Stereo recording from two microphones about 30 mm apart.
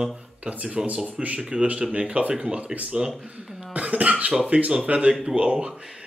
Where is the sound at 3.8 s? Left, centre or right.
Right.